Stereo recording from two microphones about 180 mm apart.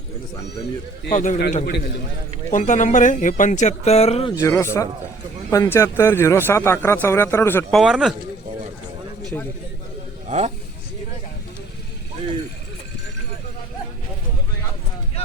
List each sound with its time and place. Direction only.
1.1 s speech: 45° left (ahead or behind)
4.4 s a man's voice: 15° left (ahead or behind)
7.7 s speech: centre (ahead or behind)
9.3 s a man's voice: 5° left (ahead or behind)
10.2 s speech: 40° right (ahead or behind)